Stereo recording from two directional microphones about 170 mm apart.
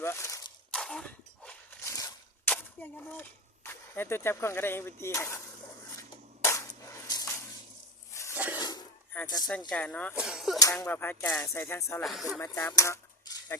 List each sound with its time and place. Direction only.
0.0 s speech: 15° left (ahead or behind)
0.7 s a sound: 5° left (ahead or behind)
1.8 s a sound: 20° left (ahead or behind)
2.5 s speech: 10° left (ahead or behind)
6.0 s a sound: 15° left (ahead or behind)
9.2 s speech: 25° left (ahead or behind)
9.6 s speech: 5° left (ahead or behind)
10.2 s speech: 5° right (ahead or behind)
10.6 s speech: 15° left (ahead or behind)
12.0 s speech: centre (ahead or behind)
12.4 s speech: 20° left (ahead or behind)